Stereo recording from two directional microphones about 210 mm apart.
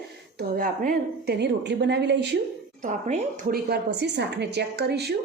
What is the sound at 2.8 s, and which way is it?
A woman's voice, 35° right (ahead or behind).